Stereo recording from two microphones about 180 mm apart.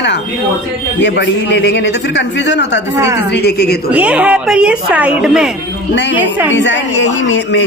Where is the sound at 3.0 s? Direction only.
15° right (ahead or behind).